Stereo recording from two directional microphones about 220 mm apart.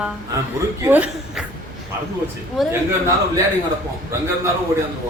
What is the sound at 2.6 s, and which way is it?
Speech, centre (ahead or behind).